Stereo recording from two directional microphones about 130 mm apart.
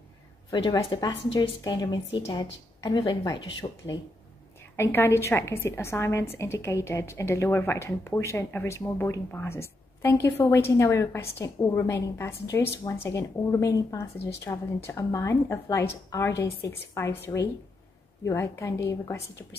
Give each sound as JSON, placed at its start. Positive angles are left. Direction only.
{"t": 0.8, "sound": "a woman's voice", "side_deg": 35}
{"t": 3.6, "sound": "speech", "side_deg": 40}
{"t": 4.6, "sound": "a woman's voice", "side_deg": 20}